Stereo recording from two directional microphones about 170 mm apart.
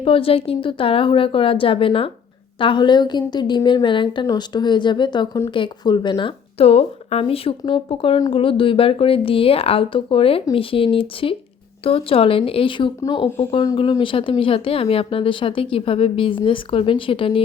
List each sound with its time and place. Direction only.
0.0 s a woman's voice: 35° left (ahead or behind)
13.2 s speech: 35° left (ahead or behind)